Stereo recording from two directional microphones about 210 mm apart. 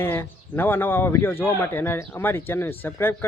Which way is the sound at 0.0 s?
10° left (ahead or behind).